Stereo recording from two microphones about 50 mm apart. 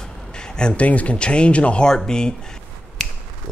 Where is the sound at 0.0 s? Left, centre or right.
Centre.